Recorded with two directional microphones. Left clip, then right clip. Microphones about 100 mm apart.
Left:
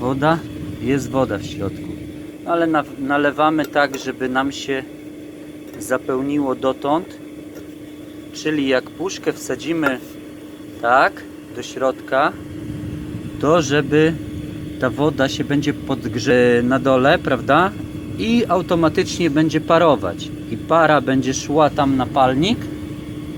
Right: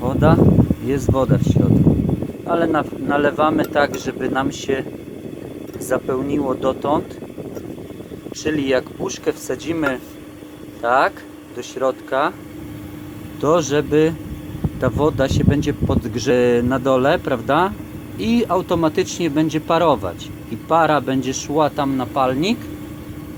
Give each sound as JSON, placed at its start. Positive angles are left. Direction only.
{"t": 0.0, "sound": "speech", "side_deg": 0}
{"t": 0.9, "sound": "speech", "side_deg": -15}
{"t": 5.9, "sound": "speech", "side_deg": -10}
{"t": 8.4, "sound": "speech", "side_deg": -15}
{"t": 13.4, "sound": "a man's voice", "side_deg": -15}
{"t": 16.3, "sound": "speech", "side_deg": -15}